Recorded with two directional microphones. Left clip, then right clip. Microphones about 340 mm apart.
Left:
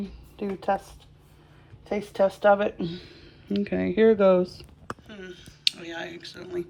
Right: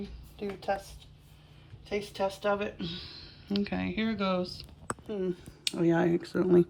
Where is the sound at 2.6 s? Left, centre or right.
Centre.